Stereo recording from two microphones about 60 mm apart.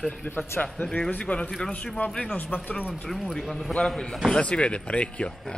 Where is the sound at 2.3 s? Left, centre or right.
Left.